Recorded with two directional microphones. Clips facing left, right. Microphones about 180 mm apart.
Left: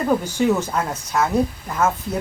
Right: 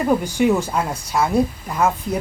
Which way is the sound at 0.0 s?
10° right (ahead or behind).